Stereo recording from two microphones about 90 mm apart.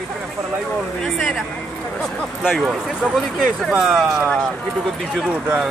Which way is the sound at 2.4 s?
5° right (ahead or behind).